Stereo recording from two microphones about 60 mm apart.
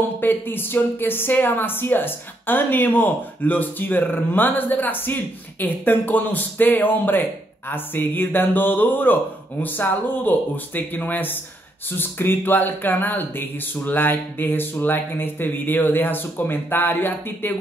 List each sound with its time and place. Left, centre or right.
0.2 s speech: left